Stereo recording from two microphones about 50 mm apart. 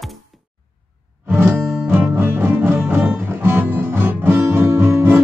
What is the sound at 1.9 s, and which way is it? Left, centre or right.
Music, right.